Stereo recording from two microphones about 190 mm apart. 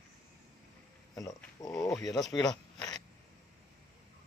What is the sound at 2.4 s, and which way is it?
Zipper, 20° left (ahead or behind).